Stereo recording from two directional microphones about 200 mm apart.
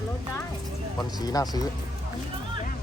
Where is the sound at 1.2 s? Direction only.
20° left (ahead or behind).